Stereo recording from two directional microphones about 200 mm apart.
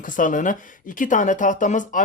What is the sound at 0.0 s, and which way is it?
Speech, 40° left (ahead or behind).